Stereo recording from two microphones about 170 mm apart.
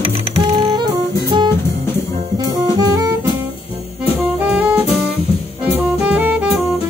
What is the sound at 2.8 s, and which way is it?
Jazz, 20° right (ahead or behind).